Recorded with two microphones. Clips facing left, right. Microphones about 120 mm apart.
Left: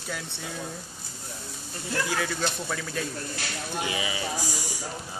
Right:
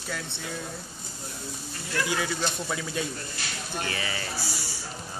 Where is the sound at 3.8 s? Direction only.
10° left (ahead or behind).